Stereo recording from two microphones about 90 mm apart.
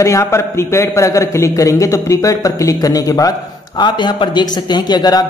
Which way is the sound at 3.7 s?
60° left (ahead or behind).